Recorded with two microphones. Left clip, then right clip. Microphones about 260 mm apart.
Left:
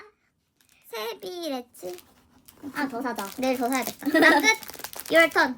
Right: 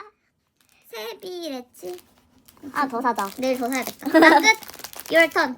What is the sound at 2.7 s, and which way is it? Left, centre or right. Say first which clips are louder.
Speech: right 7 dB; centre.